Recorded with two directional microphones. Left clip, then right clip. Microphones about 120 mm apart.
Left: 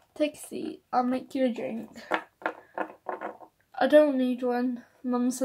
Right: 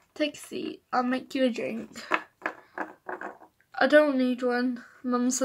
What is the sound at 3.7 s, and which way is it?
A woman's voice, centre (ahead or behind).